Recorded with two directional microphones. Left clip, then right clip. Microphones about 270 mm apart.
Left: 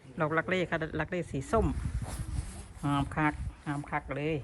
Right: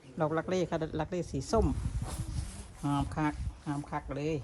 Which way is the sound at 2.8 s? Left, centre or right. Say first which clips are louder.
Left 3 dB; centre.